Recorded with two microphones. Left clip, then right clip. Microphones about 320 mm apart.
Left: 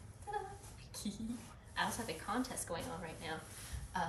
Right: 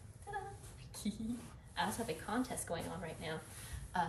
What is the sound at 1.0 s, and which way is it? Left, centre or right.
Speech, centre.